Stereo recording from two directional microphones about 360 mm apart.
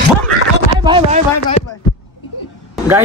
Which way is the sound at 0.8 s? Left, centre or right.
Centre.